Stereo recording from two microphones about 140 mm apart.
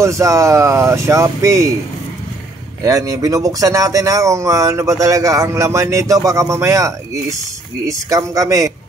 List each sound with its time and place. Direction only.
0.0 s speech: 20° right (ahead or behind)
2.8 s speech: 25° right (ahead or behind)